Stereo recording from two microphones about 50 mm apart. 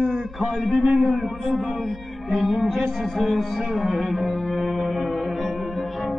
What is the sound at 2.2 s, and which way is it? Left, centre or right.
Music, centre.